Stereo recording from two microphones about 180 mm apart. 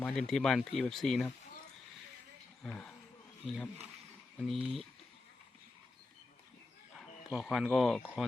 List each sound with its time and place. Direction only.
0.0 s speech: 5° left (ahead or behind)
2.6 s speech: 5° left (ahead or behind)
4.4 s speech: centre (ahead or behind)
7.3 s speech: centre (ahead or behind)